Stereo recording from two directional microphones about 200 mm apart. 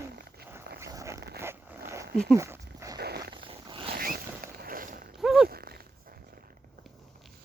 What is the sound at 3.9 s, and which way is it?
Zipper, 45° right (ahead or behind).